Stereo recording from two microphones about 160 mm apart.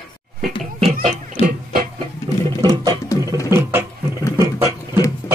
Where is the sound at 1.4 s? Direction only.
40° left (ahead or behind).